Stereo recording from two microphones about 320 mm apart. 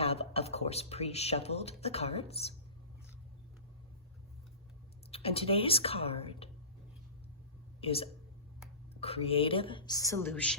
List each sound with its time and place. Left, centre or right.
0.0 s speech: centre
5.1 s a woman's voice: centre
7.8 s a woman's voice: centre